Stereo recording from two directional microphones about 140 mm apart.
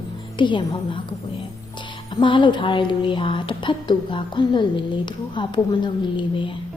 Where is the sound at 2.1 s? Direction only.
35° left (ahead or behind).